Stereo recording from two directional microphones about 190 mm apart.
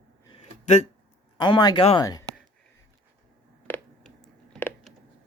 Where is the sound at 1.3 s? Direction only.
25° left (ahead or behind).